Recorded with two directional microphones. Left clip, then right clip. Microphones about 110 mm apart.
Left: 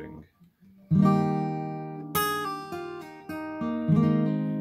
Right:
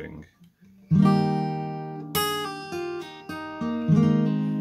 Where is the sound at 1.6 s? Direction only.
15° left (ahead or behind).